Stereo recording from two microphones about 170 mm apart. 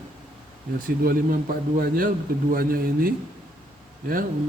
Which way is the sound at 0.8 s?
55° right (ahead or behind).